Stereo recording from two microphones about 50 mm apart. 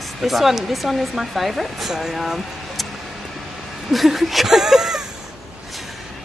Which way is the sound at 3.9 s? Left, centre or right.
Centre.